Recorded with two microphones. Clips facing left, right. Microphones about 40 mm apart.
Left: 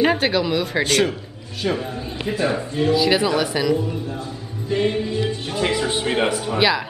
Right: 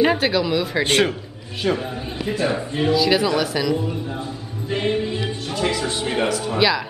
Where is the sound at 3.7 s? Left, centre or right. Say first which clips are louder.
Left 1 dB; centre.